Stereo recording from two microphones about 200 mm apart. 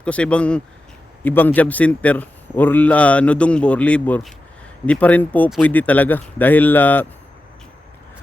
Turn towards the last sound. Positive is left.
turn(degrees=10)  # may be behind; listen again after turning